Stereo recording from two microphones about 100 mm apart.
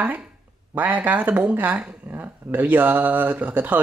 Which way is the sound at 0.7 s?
15° right (ahead or behind).